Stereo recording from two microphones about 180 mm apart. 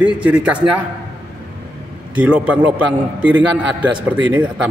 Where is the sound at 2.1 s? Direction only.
5° right (ahead or behind).